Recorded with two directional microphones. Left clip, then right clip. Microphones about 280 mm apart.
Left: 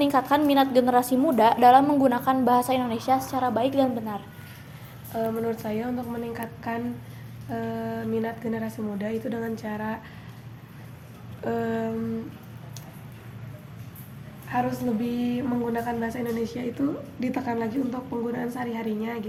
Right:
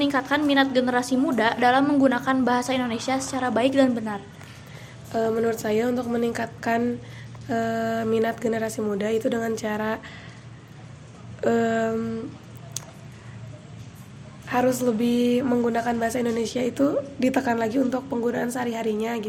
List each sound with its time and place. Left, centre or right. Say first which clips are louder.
0.0 s a woman's voice: left 1 dB; centre
3.5 s a woman's voice: right 6 dB; centre
5.1 s a woman's voice: right 5 dB; right
11.4 s a woman's voice: right 6 dB; right
14.5 s a woman's voice: right 5 dB; right